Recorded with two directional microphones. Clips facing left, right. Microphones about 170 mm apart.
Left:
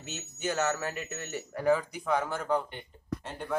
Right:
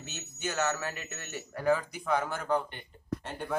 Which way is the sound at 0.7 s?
20° left (ahead or behind).